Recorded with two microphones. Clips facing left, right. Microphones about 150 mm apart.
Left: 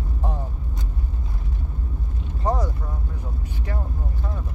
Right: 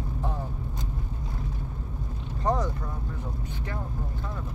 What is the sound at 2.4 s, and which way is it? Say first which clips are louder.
Vehicle: left 2 dB; 10° left (ahead or behind).